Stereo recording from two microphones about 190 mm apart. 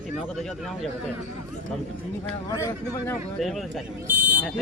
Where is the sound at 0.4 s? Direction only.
Centre (ahead or behind).